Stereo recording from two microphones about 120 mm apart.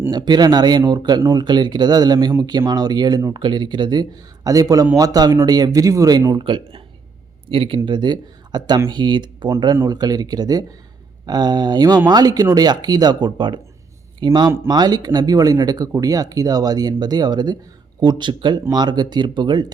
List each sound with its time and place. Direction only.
0.1 s speech: 35° right (ahead or behind)
7.9 s speech: 40° right (ahead or behind)